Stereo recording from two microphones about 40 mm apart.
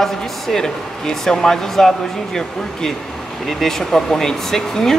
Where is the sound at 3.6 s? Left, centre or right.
Centre.